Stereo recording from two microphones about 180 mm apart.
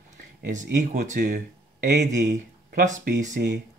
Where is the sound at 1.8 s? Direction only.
70° right (ahead or behind); by 3.4 s 45° right (ahead or behind).